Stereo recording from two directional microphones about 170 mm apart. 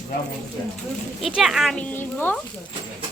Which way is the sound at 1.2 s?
Centre (ahead or behind).